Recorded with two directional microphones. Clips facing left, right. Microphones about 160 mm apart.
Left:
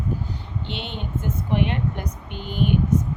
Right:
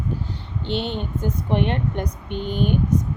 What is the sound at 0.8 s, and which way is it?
Speech, 35° right (ahead or behind).